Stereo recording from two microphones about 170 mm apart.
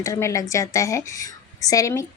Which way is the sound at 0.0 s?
20° left (ahead or behind).